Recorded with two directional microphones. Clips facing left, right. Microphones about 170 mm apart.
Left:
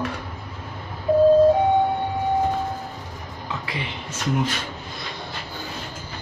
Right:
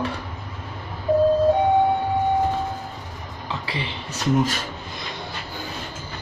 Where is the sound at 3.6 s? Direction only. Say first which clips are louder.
Right 1 dB; 35° right (ahead or behind).